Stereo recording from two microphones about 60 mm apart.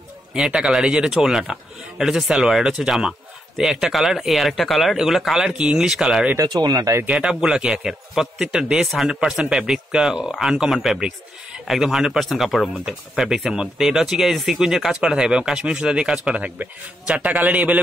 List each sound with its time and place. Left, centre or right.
0.3 s a man's voice: centre
5.6 s speech: centre
5.9 s speech: centre
6.3 s speech: right
7.1 s a man's voice: centre